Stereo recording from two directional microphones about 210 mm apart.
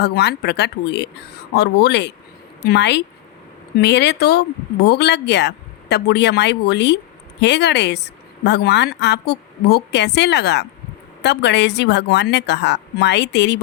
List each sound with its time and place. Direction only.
0.0 s a woman's voice: 50° left (ahead or behind)